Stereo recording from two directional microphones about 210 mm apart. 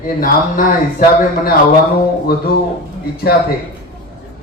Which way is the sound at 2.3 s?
45° left (ahead or behind).